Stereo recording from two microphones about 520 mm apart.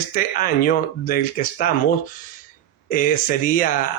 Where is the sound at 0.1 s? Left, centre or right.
Centre.